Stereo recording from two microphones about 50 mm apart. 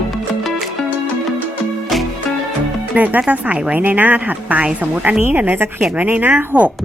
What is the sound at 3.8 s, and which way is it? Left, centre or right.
A woman's voice, right.